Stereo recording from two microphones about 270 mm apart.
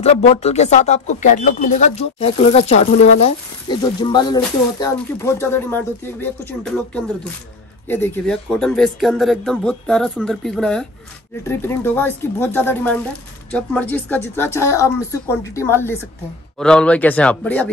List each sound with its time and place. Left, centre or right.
0.0 s speech: left; by 5.8 s centre
7.9 s speech: centre